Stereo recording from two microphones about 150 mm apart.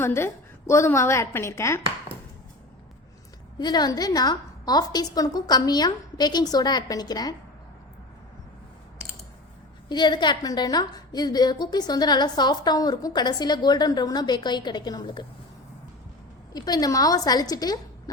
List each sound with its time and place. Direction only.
0.0 s speech: 15° left (ahead or behind)
3.6 s a woman's voice: 30° left (ahead or behind)
9.9 s a woman's voice: 30° left (ahead or behind)
16.5 s a woman's voice: 25° left (ahead or behind)